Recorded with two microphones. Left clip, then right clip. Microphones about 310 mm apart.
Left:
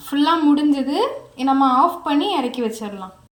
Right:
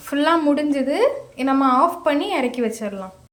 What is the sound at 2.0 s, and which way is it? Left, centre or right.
Speech, right.